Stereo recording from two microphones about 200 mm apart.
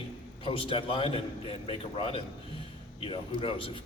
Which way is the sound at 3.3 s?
25° left (ahead or behind).